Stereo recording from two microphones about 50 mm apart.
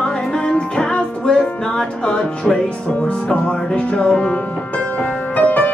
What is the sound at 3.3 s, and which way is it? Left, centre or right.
Music, left.